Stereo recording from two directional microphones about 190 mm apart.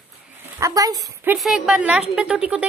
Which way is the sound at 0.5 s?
20° right (ahead or behind).